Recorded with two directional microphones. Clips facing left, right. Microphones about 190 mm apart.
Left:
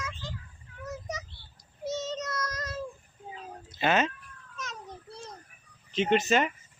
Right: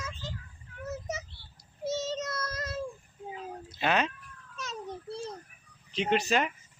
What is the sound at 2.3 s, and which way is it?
Child singing, 30° right (ahead or behind).